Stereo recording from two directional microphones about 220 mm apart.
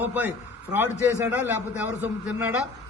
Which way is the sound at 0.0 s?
10° right (ahead or behind).